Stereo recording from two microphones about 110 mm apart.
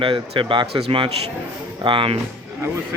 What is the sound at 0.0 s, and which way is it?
Speech, 50° right (ahead or behind).